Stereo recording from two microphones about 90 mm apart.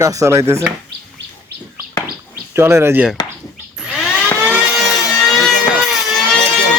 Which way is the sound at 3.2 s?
50° left (ahead or behind).